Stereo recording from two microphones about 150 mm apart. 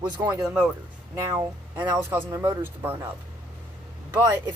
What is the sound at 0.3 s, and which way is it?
Speech, 25° right (ahead or behind).